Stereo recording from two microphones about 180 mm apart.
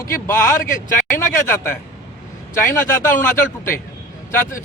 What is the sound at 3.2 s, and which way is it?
Speech, 10° left (ahead or behind).